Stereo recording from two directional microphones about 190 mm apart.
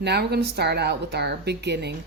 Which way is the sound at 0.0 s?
60° right (ahead or behind).